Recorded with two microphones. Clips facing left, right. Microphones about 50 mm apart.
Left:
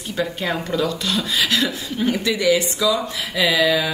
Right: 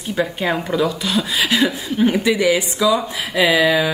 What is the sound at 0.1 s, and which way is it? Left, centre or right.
Speech, centre.